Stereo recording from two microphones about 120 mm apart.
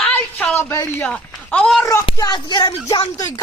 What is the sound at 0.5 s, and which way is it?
Speech, 20° left (ahead or behind).